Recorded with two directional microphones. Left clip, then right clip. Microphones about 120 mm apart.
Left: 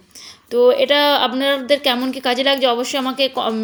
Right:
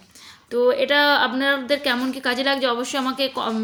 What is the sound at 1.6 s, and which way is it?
Speech, 60° right (ahead or behind).